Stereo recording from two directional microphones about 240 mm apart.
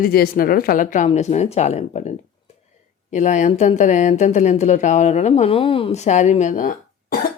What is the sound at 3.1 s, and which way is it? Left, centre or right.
Speech, left.